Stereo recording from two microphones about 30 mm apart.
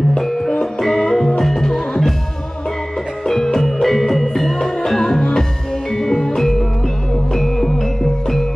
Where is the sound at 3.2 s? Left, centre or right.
Centre.